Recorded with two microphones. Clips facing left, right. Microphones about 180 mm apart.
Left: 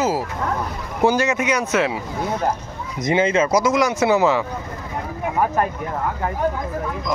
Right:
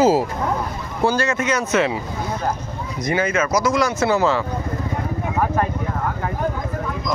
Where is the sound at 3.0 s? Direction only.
20° left (ahead or behind).